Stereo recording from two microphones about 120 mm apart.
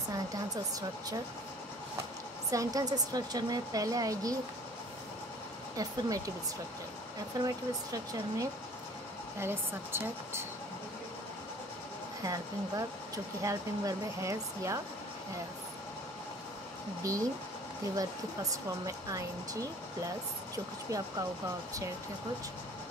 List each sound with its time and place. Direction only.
2.5 s a woman's voice: 30° right (ahead or behind)
5.8 s a woman's voice: 30° right (ahead or behind)
7.4 s a woman's voice: 30° right (ahead or behind)
9.4 s speech: 20° right (ahead or behind)
12.2 s speech: 30° right (ahead or behind)
17.0 s speech: 30° right (ahead or behind)
20.9 s speech: 30° right (ahead or behind)